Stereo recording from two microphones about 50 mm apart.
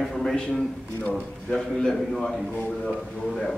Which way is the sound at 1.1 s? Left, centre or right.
Left.